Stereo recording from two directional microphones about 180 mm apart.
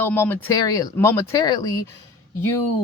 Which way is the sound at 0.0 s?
10° left (ahead or behind).